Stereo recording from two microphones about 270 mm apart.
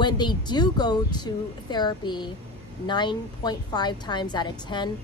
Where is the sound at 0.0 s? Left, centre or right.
Centre.